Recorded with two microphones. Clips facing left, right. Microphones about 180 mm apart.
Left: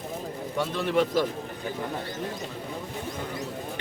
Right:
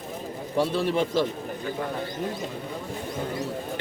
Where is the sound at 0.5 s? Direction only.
30° right (ahead or behind).